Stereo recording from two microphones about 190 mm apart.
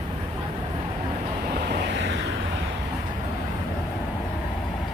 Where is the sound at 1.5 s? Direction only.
60° right (ahead or behind).